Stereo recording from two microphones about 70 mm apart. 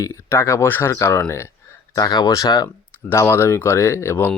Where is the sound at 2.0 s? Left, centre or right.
Left.